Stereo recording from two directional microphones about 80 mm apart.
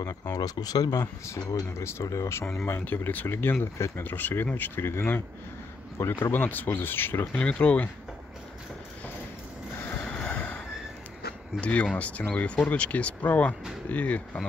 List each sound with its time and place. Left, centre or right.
0.0 s speech: left
1.2 s speech: left
2.6 s speech: left
4.0 s speech: left
7.4 s speech: centre
9.9 s a sound: centre
11.6 s speech: centre